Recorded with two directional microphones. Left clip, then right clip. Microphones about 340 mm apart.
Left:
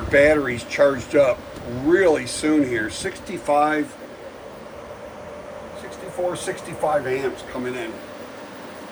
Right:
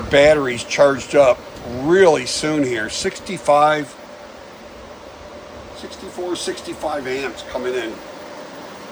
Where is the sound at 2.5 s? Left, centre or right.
Right.